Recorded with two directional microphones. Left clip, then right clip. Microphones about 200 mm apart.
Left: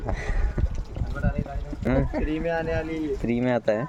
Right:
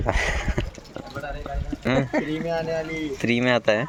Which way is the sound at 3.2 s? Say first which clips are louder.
Right 4 dB; 5° left (ahead or behind).